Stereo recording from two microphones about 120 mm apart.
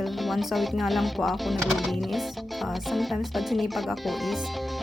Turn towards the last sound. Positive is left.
turn(degrees=0)  # may be behind; listen again after turning